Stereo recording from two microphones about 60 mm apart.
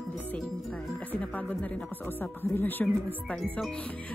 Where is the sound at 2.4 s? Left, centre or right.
Left.